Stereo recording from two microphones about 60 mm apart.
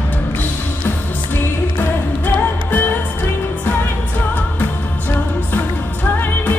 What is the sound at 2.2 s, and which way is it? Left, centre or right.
Music, left.